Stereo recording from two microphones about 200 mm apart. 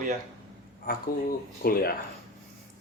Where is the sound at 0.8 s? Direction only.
50° left (ahead or behind).